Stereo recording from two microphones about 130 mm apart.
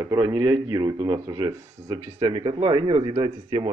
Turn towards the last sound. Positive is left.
turn(degrees=-45)  # may be behind; listen again after turning